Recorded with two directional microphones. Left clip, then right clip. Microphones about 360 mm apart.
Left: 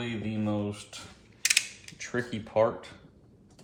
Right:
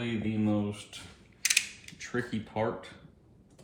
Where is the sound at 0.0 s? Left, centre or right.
Centre.